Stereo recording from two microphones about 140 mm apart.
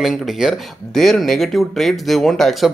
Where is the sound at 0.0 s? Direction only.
Centre (ahead or behind).